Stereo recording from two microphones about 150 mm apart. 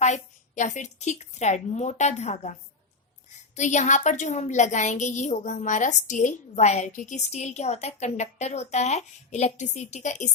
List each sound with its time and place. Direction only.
0.0 s a woman's voice: 55° left (ahead or behind)